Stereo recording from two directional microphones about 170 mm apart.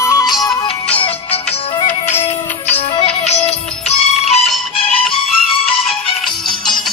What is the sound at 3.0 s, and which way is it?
Music, 40° left (ahead or behind).